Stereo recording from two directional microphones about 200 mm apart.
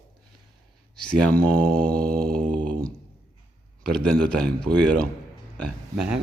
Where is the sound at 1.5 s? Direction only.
50° right (ahead or behind).